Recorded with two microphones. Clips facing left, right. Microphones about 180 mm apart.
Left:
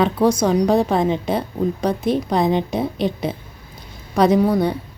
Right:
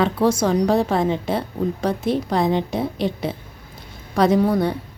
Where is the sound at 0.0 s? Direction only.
15° left (ahead or behind).